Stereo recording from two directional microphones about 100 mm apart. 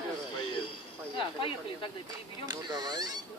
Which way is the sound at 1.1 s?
60° left (ahead or behind).